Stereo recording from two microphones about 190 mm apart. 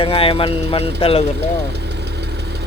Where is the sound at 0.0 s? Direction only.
30° left (ahead or behind).